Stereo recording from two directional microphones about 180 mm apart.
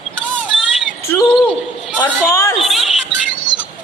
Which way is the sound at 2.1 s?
15° left (ahead or behind).